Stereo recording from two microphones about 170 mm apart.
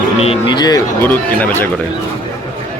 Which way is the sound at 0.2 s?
30° left (ahead or behind).